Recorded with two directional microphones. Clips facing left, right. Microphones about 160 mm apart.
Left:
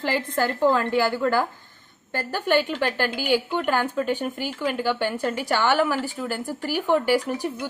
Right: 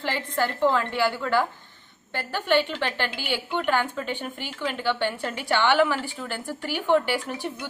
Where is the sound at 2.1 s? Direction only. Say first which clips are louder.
Left 2 dB; 45° left (ahead or behind).